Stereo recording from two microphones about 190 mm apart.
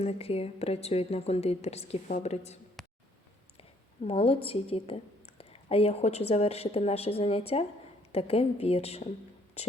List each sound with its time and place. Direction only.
0.0 s a woman's voice: 30° left (ahead or behind)
2.8 s a sound: centre (ahead or behind)
3.6 s a woman's voice: 30° left (ahead or behind)